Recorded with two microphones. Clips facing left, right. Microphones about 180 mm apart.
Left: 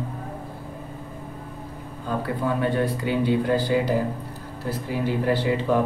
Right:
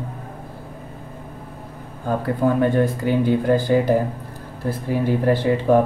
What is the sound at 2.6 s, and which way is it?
Speech, 45° right (ahead or behind).